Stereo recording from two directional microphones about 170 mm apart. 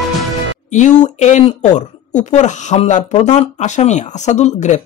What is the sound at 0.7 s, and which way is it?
Speech, 45° left (ahead or behind).